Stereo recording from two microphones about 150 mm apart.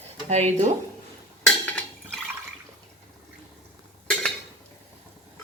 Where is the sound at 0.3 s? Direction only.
50° right (ahead or behind).